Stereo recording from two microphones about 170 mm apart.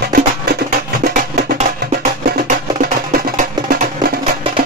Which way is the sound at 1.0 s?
50° right (ahead or behind).